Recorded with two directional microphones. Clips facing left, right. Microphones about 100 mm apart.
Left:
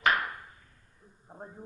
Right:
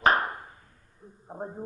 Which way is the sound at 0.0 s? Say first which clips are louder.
Right 4 dB; 35° right (ahead or behind).